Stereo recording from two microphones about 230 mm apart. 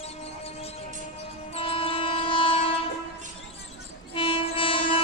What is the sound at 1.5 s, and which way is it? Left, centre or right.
Train, left.